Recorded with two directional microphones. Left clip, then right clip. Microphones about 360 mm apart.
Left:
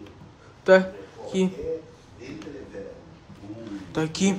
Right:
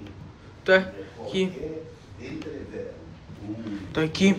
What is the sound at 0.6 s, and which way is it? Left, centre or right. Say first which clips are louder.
Speech: left 3 dB; centre.